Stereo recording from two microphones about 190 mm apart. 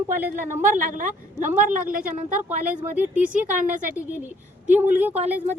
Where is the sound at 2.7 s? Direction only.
10° right (ahead or behind).